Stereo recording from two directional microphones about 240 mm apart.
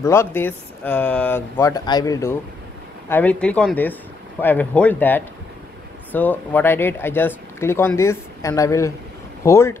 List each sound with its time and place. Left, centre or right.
0.0 s speech: centre